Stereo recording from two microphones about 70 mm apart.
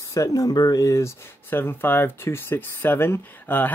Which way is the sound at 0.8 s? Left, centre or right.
Left.